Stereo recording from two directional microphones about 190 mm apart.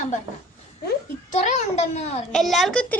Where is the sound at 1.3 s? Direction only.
35° left (ahead or behind).